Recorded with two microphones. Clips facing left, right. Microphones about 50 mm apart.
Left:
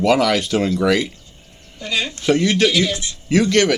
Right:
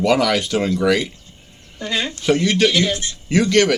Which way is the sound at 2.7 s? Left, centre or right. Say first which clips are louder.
Even; right.